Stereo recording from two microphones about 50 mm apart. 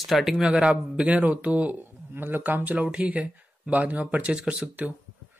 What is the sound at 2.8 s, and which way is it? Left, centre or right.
Speech, right.